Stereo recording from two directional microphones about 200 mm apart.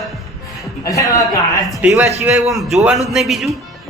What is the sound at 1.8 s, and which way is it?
A man's voice, 5° right (ahead or behind).